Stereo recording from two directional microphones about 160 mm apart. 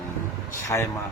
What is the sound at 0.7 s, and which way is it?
Speech, 20° left (ahead or behind).